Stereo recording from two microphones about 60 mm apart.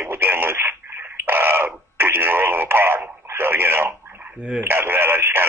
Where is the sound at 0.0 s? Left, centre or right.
Right.